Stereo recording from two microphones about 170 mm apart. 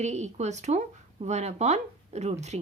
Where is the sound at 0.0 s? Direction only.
40° right (ahead or behind).